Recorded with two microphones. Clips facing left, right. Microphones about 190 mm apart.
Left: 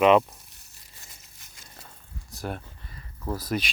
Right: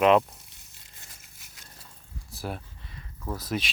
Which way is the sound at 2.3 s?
5° right (ahead or behind).